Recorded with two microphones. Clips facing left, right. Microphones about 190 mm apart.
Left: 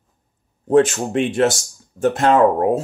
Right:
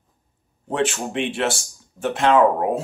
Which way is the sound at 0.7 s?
40° left (ahead or behind).